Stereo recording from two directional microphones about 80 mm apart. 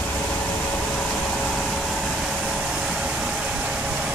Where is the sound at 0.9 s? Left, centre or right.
Centre.